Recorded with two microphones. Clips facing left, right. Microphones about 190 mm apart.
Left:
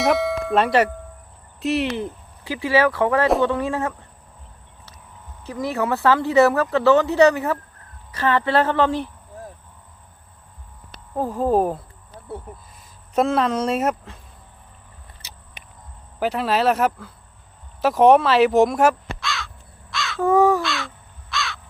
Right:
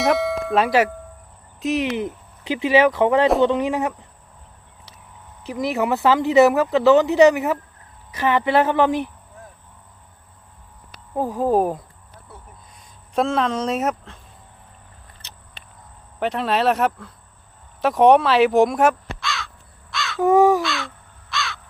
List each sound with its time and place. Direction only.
0.0 s tubular bells: centre (ahead or behind)
1.8 s speech: 15° right (ahead or behind)
5.5 s speech: 15° right (ahead or behind)
11.1 s speech: 10° right (ahead or behind)
13.1 s speech: centre (ahead or behind)
15.6 s a sound: 15° left (ahead or behind)
16.2 s speech: 5° left (ahead or behind)
19.9 s crow: centre (ahead or behind)
20.2 s speech: 15° right (ahead or behind)
20.6 s crow: centre (ahead or behind)